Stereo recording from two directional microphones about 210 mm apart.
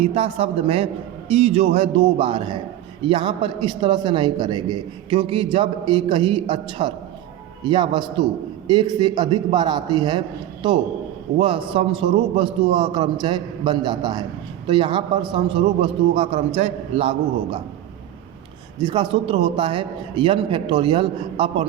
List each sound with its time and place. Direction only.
0.0 s a man's voice: 25° right (ahead or behind)
18.8 s a man's voice: 20° right (ahead or behind)